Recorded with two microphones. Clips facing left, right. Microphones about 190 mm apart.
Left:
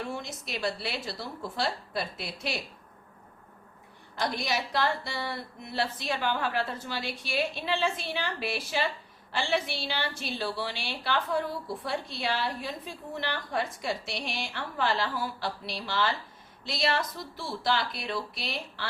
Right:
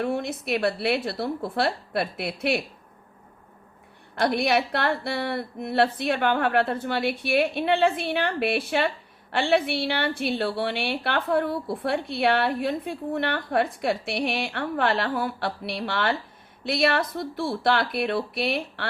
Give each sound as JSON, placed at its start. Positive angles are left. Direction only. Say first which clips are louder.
{"t": 0.0, "sound": "a woman's voice", "louder": "right 9 dB", "side_deg": -60}
{"t": 4.1, "sound": "a woman's voice", "louder": "right 8 dB", "side_deg": -60}